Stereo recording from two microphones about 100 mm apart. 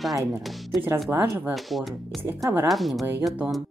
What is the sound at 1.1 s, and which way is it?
Speech, 25° right (ahead or behind).